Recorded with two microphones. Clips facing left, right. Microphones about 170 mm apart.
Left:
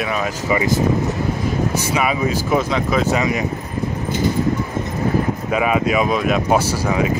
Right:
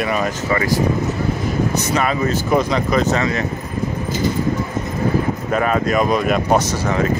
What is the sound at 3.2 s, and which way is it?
Speech, 15° left (ahead or behind).